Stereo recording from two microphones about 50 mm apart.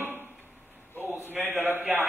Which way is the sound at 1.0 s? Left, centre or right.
Right.